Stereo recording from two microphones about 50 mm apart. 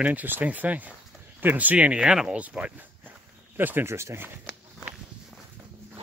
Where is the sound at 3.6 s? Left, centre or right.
Right.